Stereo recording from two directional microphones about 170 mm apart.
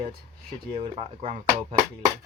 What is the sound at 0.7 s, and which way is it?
Speech, 30° right (ahead or behind).